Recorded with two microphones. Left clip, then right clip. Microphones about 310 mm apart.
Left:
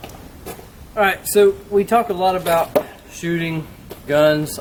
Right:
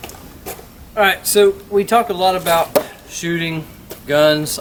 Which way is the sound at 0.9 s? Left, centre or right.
Centre.